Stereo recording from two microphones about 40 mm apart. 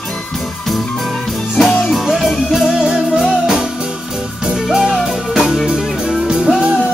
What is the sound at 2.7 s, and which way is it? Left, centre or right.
Music, centre.